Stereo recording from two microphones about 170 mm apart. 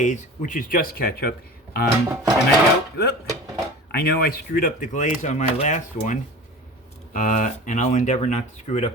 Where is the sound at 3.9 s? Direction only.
70° left (ahead or behind).